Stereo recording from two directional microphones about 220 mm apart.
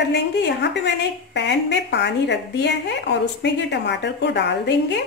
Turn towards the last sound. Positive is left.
turn(degrees=50)  # may be behind; listen again after turning